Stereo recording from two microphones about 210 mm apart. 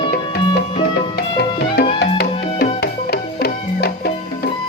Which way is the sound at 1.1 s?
50° left (ahead or behind).